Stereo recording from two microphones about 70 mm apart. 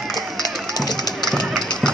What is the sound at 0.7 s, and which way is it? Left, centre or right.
Music, left.